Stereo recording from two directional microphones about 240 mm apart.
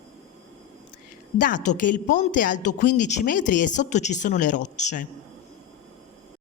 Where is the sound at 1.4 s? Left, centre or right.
Left.